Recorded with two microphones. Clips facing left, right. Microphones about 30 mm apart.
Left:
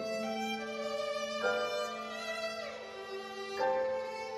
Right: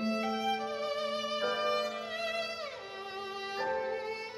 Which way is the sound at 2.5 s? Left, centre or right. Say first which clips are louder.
Right 1 dB; right.